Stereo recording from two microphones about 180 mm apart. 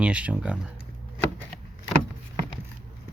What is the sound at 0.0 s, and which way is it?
Speech, 5° right (ahead or behind).